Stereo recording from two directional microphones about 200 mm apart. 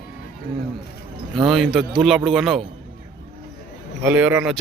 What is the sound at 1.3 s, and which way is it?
A man's voice, centre (ahead or behind).